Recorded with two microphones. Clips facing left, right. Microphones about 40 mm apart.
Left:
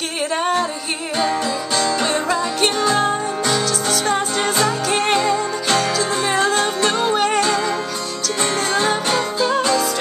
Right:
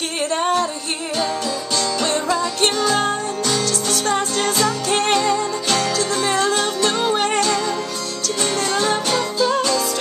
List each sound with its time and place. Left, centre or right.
0.3 s music: centre